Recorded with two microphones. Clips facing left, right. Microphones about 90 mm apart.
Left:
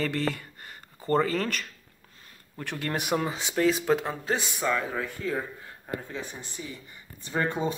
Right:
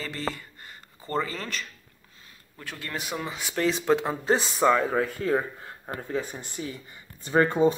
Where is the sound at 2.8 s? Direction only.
60° left (ahead or behind).